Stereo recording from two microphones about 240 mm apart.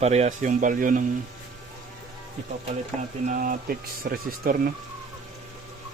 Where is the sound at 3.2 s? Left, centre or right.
Right.